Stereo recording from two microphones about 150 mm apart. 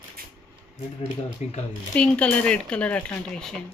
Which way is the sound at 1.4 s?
50° left (ahead or behind).